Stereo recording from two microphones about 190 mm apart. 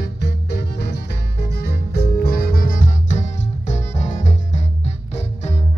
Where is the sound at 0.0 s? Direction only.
60° left (ahead or behind); by 5.6 s 35° left (ahead or behind).